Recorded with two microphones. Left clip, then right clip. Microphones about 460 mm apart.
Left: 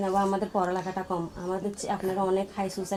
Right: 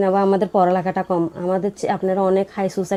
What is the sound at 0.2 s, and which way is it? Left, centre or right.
Speech, right.